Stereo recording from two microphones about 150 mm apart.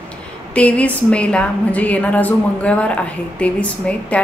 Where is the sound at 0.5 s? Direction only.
10° left (ahead or behind).